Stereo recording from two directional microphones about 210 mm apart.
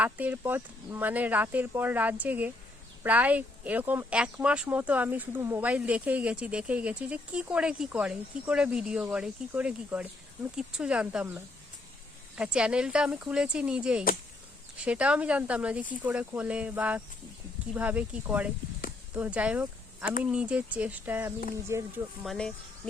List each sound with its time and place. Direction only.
0.0 s speech: 5° right (ahead or behind)
12.4 s speech: 5° right (ahead or behind)
22.2 s speech: centre (ahead or behind)